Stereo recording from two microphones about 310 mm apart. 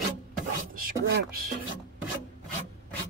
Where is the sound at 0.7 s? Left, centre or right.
Right.